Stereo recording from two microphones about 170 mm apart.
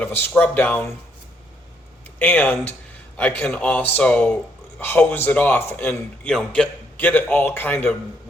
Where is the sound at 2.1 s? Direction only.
10° left (ahead or behind).